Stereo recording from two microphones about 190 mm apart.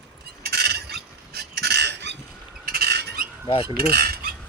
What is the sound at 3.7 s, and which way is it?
Cutlery, 55° right (ahead or behind).